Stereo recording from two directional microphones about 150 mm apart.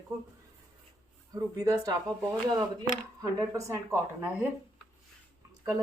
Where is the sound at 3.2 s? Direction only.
20° right (ahead or behind).